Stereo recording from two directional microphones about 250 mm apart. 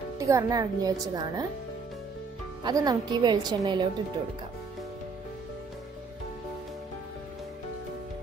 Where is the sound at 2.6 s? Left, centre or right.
Centre.